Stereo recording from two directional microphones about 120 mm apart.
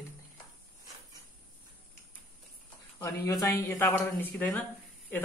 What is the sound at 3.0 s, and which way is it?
Speech, 25° left (ahead or behind).